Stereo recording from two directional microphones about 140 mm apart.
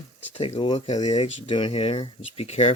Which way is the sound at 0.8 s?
55° left (ahead or behind).